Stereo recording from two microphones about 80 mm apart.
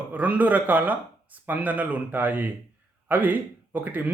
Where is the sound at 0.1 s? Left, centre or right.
Right.